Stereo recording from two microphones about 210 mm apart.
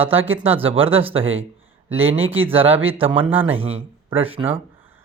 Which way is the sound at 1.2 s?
70° right (ahead or behind).